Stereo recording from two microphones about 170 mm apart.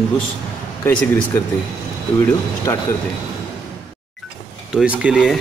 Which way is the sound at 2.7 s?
15° left (ahead or behind).